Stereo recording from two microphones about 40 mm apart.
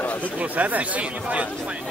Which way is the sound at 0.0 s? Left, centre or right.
Left.